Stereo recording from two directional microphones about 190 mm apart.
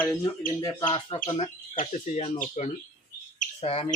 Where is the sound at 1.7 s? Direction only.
40° left (ahead or behind).